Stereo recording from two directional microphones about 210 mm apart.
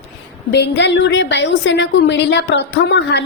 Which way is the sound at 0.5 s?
55° left (ahead or behind).